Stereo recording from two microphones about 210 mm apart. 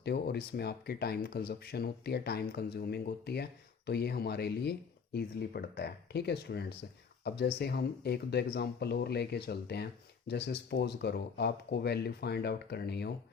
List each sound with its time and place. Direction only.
0.0 s speech: 50° left (ahead or behind)